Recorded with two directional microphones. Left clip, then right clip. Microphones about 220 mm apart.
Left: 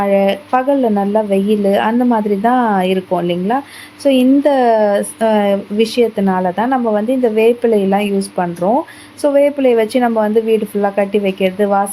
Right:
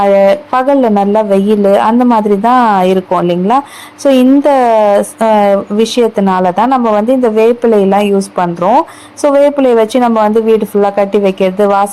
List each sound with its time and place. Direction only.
0.0 s a woman's voice: 15° right (ahead or behind)